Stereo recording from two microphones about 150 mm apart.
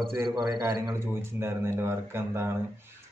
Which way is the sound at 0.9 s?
15° right (ahead or behind).